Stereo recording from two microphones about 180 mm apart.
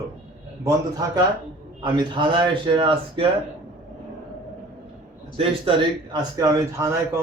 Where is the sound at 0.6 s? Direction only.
20° right (ahead or behind).